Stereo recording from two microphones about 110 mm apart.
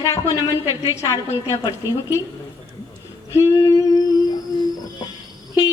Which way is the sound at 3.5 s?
35° left (ahead or behind).